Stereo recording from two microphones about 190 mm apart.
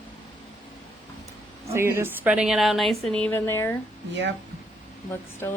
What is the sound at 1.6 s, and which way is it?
A woman's voice, 15° right (ahead or behind).